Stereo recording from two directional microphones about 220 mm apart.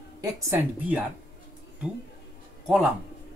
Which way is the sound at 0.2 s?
10° right (ahead or behind).